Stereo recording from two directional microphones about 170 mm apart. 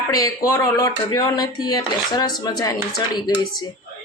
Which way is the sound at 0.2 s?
20° left (ahead or behind).